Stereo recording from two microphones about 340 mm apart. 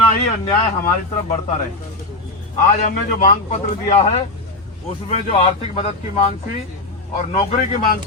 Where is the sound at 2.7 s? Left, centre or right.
Left.